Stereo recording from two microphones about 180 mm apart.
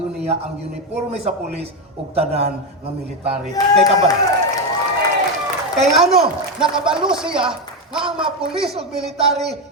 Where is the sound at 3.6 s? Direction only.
20° left (ahead or behind).